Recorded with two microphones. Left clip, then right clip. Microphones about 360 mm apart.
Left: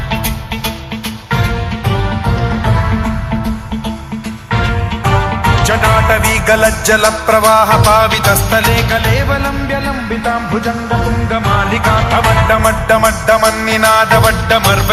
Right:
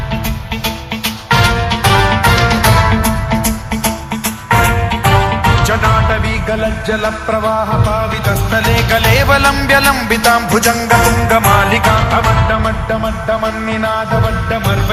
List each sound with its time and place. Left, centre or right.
1.3 s music: centre; by 3.1 s right
4.4 s music: right
5.0 s music: centre; by 6.6 s left
6.8 s music: left
7.8 s music: left
8.2 s music: centre
9.7 s music: right
10.2 s music: right
10.9 s music: right; by 12.7 s centre
13.0 s music: left
14.5 s music: centre